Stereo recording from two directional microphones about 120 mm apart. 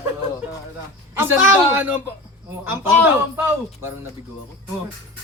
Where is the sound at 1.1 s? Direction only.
20° right (ahead or behind).